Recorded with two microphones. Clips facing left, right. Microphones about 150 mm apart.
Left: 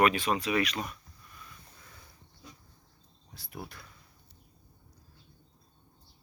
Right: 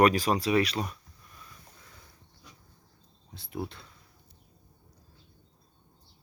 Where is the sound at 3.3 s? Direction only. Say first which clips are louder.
Right 7 dB; 25° right (ahead or behind).